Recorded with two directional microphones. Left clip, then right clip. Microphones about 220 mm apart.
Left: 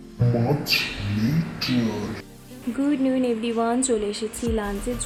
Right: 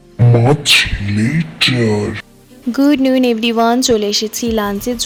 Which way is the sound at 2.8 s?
45° right (ahead or behind).